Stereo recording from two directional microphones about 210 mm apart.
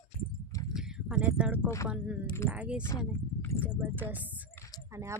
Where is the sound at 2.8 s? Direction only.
10° left (ahead or behind).